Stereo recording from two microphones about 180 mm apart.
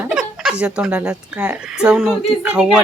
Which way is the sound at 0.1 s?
Centre (ahead or behind).